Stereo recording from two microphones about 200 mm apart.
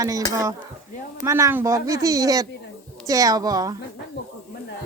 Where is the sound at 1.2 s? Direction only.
15° right (ahead or behind).